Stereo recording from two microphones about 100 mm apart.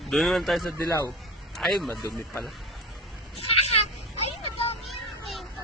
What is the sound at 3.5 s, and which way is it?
Vehicle, 90° left.